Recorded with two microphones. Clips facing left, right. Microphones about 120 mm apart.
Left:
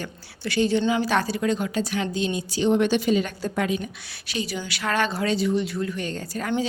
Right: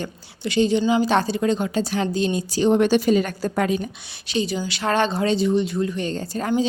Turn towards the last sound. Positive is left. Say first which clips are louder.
# right 4 dB
turn(degrees=-25)  # may be behind; listen again after turning